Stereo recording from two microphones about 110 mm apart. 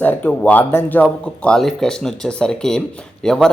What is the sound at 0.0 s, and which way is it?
Speech, 15° left (ahead or behind).